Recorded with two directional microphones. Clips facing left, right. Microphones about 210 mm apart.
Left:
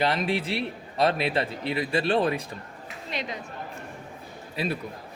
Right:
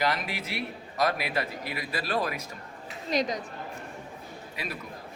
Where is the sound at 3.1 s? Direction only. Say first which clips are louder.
Right 6 dB; 40° right (ahead or behind).